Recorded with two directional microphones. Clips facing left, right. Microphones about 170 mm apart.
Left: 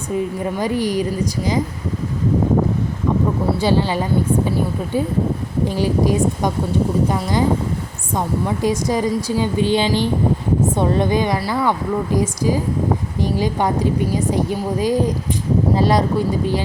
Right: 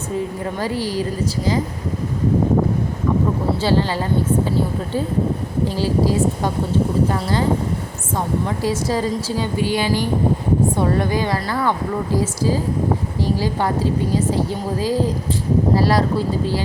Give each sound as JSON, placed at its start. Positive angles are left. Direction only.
{"t": 0.6, "sound": "a woman's voice", "side_deg": 15}
{"t": 3.6, "sound": "a woman's voice", "side_deg": 15}